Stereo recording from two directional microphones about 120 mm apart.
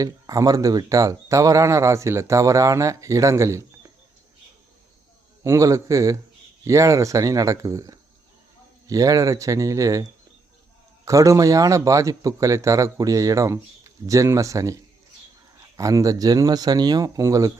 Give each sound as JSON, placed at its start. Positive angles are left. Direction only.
{"t": 0.0, "sound": "speech", "side_deg": -30}
{"t": 5.4, "sound": "speech", "side_deg": -25}
{"t": 15.8, "sound": "speech", "side_deg": -30}